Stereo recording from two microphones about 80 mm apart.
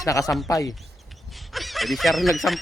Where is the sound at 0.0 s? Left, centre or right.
Left.